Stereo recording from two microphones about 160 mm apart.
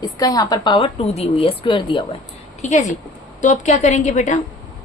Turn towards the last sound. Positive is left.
turn(degrees=50)  # may be behind; listen again after turning